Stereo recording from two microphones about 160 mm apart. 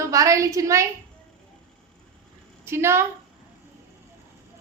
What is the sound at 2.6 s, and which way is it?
Speech, 15° right (ahead or behind).